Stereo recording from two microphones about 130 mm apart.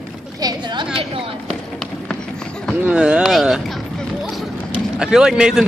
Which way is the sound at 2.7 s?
10° right (ahead or behind).